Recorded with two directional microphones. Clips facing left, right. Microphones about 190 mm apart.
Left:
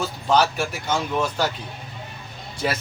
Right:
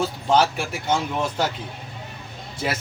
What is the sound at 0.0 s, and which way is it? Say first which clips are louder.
Speech: right 1 dB; 25° right (ahead or behind).